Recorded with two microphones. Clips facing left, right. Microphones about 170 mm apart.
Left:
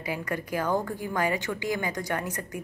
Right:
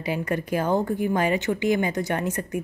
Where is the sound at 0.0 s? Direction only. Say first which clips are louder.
Right 5 dB; 25° right (ahead or behind).